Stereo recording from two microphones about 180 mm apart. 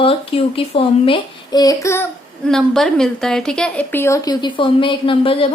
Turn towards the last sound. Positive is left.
turn(degrees=30)  # may be behind; listen again after turning